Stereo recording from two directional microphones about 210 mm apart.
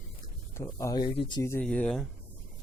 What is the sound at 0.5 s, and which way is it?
Speech, 15° left (ahead or behind).